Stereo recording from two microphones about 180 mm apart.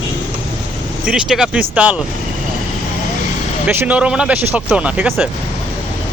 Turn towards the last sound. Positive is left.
turn(degrees=-5)  # may be behind; listen again after turning